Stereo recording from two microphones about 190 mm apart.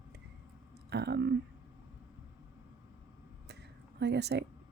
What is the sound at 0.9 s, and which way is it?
Speech, 60° right (ahead or behind).